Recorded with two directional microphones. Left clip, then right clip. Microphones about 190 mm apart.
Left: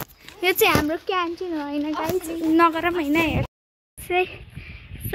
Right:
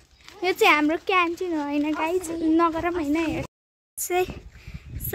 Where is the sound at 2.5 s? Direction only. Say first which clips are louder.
Left 4 dB; 5° left (ahead or behind).